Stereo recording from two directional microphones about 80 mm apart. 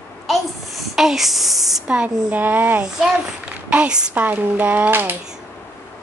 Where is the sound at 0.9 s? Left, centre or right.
Centre.